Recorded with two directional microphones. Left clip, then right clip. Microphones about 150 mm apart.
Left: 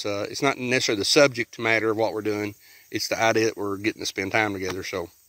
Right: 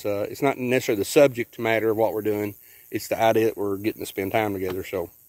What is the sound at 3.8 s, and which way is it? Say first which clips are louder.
Speech: left 1 dB; 30° right (ahead or behind).